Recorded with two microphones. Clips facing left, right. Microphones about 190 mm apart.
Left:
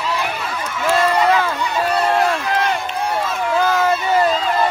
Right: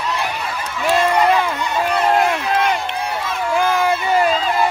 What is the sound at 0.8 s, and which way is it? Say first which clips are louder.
Crowd: even; 15° right (ahead or behind).